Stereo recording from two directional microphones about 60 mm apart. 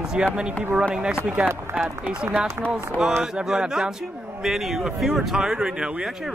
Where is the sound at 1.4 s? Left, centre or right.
Right.